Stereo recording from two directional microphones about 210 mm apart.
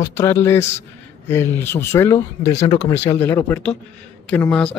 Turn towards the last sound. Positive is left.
turn(degrees=5)  # may be behind; listen again after turning